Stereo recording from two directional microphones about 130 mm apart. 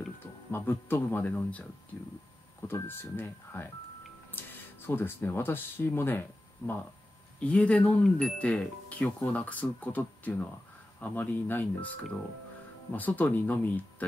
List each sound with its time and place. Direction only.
0.5 s speech: 15° left (ahead or behind)
2.7 s speech: 15° left (ahead or behind)